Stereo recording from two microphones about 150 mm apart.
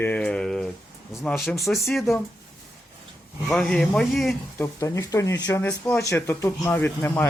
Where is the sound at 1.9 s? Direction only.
Centre (ahead or behind).